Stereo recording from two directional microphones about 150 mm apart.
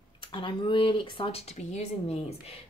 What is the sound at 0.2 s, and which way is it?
Speech, 35° left (ahead or behind).